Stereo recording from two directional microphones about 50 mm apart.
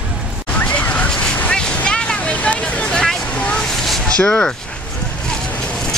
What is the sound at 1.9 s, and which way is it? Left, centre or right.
Vehicle, centre.